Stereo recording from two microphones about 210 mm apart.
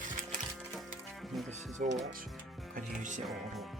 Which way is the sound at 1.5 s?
35° right (ahead or behind).